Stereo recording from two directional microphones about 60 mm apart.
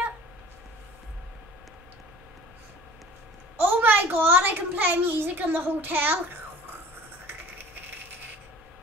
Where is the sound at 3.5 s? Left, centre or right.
Right.